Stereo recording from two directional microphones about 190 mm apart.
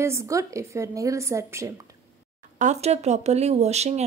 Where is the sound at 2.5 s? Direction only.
40° right (ahead or behind).